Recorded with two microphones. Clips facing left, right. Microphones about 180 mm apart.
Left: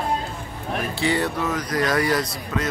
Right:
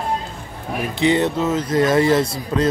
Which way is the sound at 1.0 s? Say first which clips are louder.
Right 7 dB; 20° right (ahead or behind).